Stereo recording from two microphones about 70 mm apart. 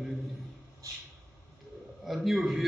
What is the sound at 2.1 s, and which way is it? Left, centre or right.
Speech, centre.